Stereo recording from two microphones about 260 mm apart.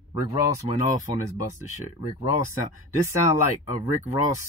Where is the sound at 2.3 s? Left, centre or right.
Left.